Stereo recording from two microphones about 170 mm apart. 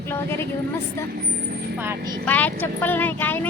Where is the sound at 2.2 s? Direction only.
10° left (ahead or behind).